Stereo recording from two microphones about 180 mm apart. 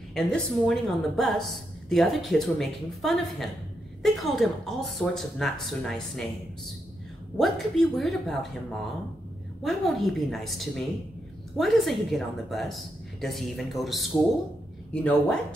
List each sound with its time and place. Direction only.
0.1 s a woman's voice: 5° left (ahead or behind)
7.3 s a woman's voice: centre (ahead or behind)